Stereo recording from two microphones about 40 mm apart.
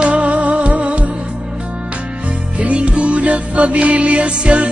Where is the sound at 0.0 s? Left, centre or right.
Right.